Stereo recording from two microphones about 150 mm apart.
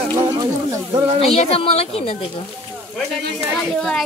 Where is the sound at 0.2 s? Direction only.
25° right (ahead or behind).